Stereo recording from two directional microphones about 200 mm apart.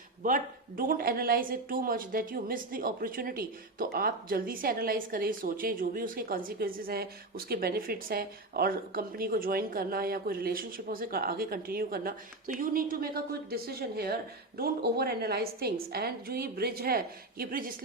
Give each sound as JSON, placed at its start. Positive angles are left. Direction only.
{"t": 0.2, "sound": "speech", "side_deg": -45}